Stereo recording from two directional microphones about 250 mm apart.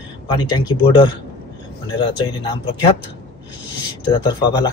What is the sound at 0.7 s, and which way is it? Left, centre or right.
Speech, centre.